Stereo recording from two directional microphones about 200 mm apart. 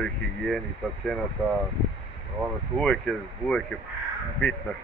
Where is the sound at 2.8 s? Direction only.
5° left (ahead or behind).